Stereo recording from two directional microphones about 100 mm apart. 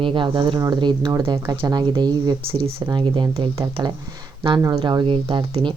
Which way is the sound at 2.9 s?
50° right (ahead or behind).